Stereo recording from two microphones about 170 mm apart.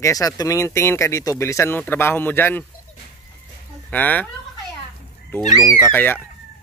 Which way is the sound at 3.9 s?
10° left (ahead or behind).